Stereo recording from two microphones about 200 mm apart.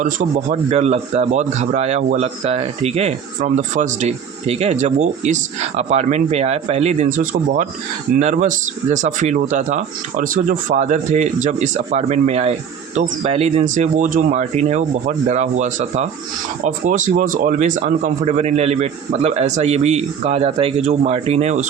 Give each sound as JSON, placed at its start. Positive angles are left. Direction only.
{"t": 0.0, "sound": "a man's voice", "side_deg": -40}